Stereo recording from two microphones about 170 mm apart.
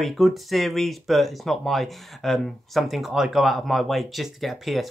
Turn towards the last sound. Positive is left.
turn(degrees=0)  # may be behind; listen again after turning